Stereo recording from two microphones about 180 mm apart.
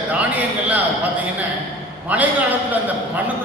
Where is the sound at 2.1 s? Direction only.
10° right (ahead or behind).